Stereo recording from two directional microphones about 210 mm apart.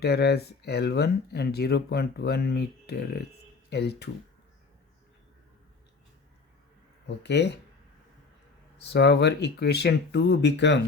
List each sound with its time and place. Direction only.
0.0 s speech: 50° left (ahead or behind)
7.2 s speech: 55° left (ahead or behind)
8.8 s speech: 55° left (ahead or behind)